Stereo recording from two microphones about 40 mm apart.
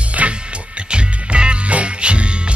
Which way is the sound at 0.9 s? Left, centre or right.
Right.